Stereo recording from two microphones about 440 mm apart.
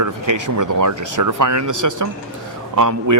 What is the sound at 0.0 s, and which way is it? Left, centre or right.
Speech, right.